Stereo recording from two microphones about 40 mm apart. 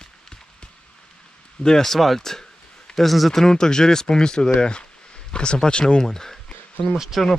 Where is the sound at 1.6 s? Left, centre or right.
Centre.